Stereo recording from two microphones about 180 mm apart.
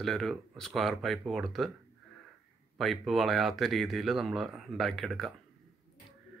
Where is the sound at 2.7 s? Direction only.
Centre (ahead or behind).